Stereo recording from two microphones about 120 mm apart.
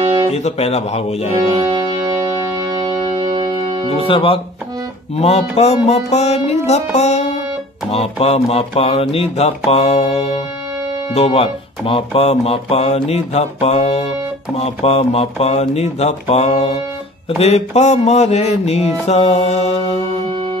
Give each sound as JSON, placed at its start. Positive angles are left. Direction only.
{"t": 0.3, "sound": "speech", "side_deg": 65}
{"t": 1.5, "sound": "music", "side_deg": -35}
{"t": 3.2, "sound": "music", "side_deg": -40}
{"t": 4.1, "sound": "speech", "side_deg": 50}
{"t": 7.9, "sound": "speech", "side_deg": 60}
{"t": 11.1, "sound": "speech", "side_deg": 55}
{"t": 20.2, "sound": "music", "side_deg": -45}